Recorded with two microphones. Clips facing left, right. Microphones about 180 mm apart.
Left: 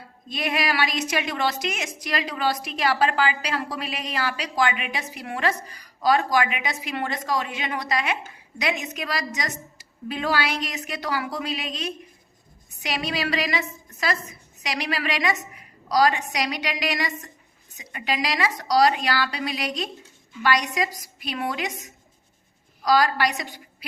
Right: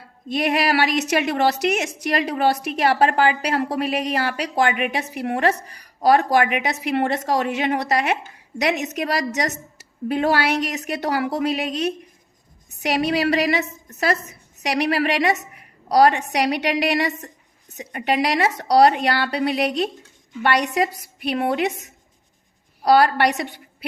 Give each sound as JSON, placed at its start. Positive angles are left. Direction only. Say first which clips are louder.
{"t": 0.3, "sound": "a woman's voice", "louder": "right 6 dB", "side_deg": -70}
{"t": 17.1, "sound": "a woman's voice", "louder": "right 6 dB", "side_deg": -35}
{"t": 18.0, "sound": "a woman's voice", "louder": "right 6 dB", "side_deg": -65}
{"t": 22.9, "sound": "a woman's voice", "louder": "right 5 dB", "side_deg": -60}